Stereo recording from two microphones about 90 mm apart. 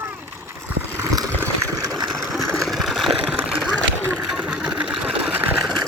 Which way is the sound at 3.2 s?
15° right (ahead or behind).